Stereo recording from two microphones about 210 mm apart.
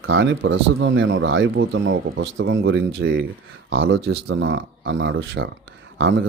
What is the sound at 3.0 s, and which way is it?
Speech, 60° right (ahead or behind).